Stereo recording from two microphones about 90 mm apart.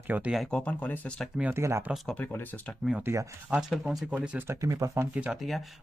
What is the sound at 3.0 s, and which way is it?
Speech, 35° right (ahead or behind).